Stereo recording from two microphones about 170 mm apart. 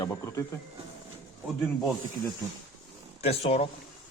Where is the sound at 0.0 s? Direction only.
20° left (ahead or behind).